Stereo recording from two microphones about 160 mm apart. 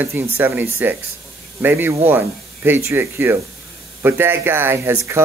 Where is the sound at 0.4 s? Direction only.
10° right (ahead or behind).